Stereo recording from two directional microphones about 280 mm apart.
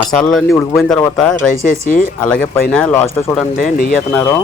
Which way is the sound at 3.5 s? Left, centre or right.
Left.